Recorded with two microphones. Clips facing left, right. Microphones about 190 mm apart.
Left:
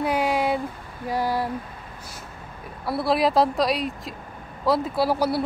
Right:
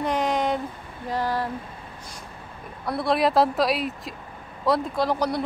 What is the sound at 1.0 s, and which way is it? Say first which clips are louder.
Speech: left 2 dB; 10° left (ahead or behind).